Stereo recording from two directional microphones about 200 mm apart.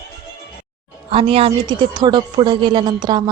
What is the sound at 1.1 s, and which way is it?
Speech, 25° right (ahead or behind).